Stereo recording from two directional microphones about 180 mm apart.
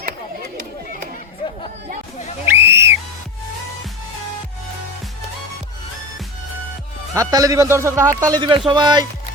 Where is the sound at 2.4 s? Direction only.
15° right (ahead or behind).